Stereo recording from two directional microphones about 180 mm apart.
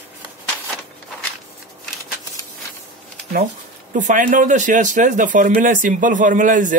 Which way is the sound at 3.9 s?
45° right (ahead or behind).